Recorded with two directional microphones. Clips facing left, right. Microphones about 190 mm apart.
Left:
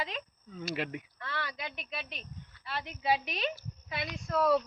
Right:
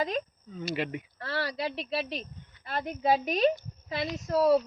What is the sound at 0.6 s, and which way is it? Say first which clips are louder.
Speech: right 3 dB; centre (ahead or behind).